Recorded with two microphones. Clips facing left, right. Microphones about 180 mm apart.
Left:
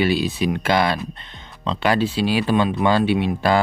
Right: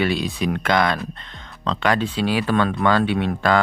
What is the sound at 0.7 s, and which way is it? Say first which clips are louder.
Speech: even; 25° left (ahead or behind).